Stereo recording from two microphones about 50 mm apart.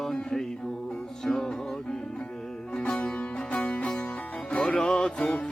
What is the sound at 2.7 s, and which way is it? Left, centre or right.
Music, centre.